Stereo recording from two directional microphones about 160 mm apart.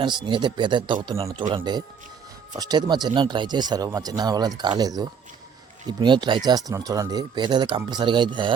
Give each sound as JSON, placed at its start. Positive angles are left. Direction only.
{"t": 0.0, "sound": "speech", "side_deg": -30}